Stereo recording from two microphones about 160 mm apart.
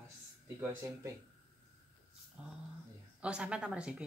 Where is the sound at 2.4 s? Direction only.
10° right (ahead or behind).